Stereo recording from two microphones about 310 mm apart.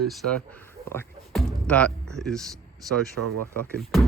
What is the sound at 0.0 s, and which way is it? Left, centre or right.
Speech, centre.